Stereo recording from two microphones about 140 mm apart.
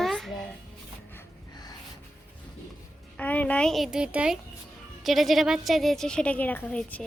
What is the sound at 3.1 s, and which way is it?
A woman's voice, 10° left (ahead or behind).